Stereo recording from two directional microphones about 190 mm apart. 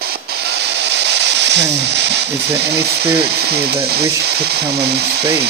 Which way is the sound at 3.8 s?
55° right (ahead or behind).